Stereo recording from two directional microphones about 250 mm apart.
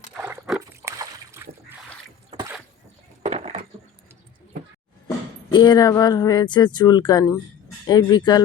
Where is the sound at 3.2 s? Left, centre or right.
Right.